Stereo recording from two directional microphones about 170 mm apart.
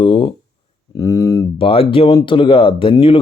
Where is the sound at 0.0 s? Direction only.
30° left (ahead or behind).